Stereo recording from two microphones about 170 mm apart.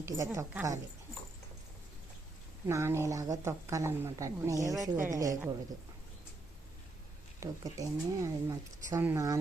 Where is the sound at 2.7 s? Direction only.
15° right (ahead or behind).